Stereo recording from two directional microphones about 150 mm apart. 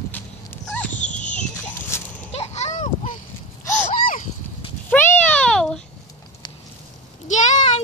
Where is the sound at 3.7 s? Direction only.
60° left (ahead or behind).